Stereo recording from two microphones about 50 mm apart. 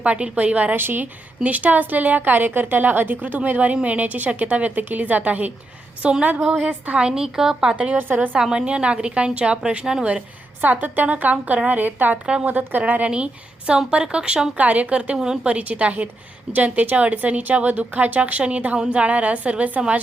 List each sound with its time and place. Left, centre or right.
0.0 s a woman's voice: right
0.8 s a woman's voice: right
1.5 s a woman's voice: right
6.6 s a woman's voice: right
6.9 s a woman's voice: centre
7.9 s a woman's voice: right
8.4 s a woman's voice: centre
10.6 s a woman's voice: right
12.2 s a woman's voice: centre
12.5 s a woman's voice: right; by 14.5 s centre
14.5 s a woman's voice: right